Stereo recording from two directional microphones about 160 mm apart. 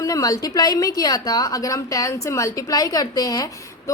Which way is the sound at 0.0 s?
20° left (ahead or behind).